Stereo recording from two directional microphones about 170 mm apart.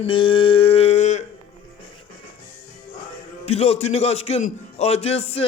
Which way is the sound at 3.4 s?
35° left (ahead or behind).